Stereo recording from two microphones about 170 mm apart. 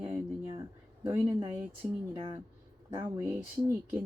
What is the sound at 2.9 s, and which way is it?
Speech, 15° right (ahead or behind).